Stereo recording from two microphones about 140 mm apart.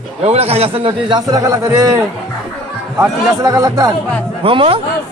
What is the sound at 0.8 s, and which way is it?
A man's voice, 35° right (ahead or behind).